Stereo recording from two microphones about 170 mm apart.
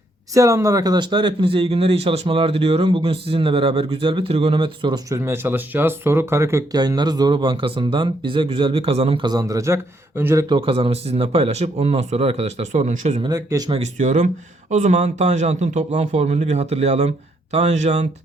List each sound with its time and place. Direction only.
0.3 s speech: 20° right (ahead or behind)
10.5 s speech: 35° right (ahead or behind)
13.2 s speech: 20° right (ahead or behind)
13.7 s speech: 40° right (ahead or behind)